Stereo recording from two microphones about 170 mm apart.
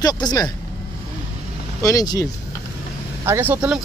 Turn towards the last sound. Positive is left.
turn(degrees=-10)  # may be behind; listen again after turning